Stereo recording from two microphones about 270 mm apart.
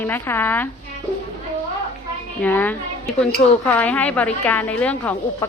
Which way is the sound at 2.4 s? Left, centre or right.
Centre.